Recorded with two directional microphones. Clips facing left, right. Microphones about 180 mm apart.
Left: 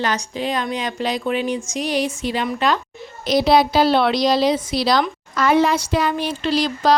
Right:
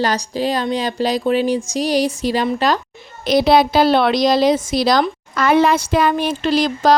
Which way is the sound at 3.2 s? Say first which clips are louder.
Right 2 dB; 55° right (ahead or behind).